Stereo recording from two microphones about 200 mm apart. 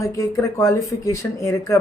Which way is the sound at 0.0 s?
15° left (ahead or behind).